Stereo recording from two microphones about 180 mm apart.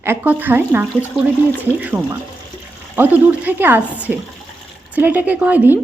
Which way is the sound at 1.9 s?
15° right (ahead or behind).